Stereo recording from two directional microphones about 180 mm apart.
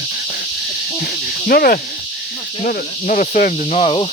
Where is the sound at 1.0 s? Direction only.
55° left (ahead or behind).